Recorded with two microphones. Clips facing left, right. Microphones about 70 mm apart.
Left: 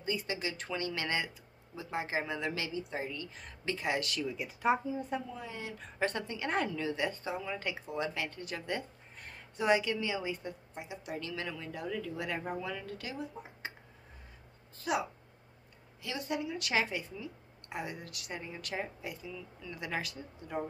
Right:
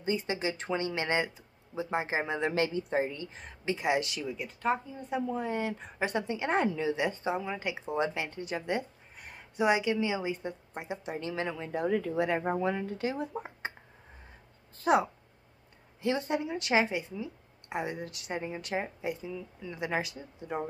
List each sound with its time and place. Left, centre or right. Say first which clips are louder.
0.0 s a woman's voice: right 5 dB; right
4.3 s speech: left 1 dB; centre
5.3 s speech: right 10 dB; right
5.8 s a woman's voice: right 2 dB; centre
10.7 s a woman's voice: right 6 dB; right
11.1 s speech: right 4 dB; right
12.2 s a woman's voice: right 8 dB; right
13.2 s speech: right 6 dB; right
14.8 s a woman's voice: right 8 dB; right